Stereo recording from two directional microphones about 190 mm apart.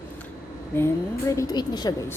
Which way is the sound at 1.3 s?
20° left (ahead or behind).